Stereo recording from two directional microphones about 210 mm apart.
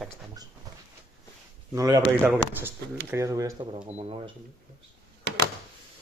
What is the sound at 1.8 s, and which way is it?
Speech, 15° right (ahead or behind).